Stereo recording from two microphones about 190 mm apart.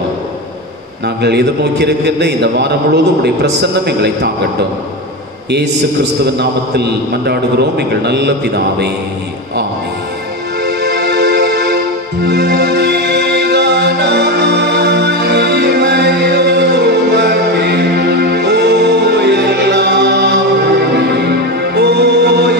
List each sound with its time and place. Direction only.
1.0 s a man's voice: 60° right (ahead or behind)
6.2 s a man's voice: 60° right (ahead or behind)
10.6 s music: 60° right (ahead or behind)